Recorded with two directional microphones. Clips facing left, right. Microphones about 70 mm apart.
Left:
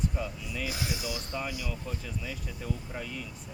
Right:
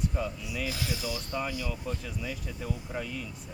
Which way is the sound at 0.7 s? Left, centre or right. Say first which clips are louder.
Even; centre.